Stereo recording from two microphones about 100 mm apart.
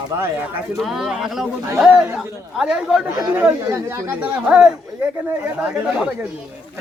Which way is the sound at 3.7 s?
30° right (ahead or behind).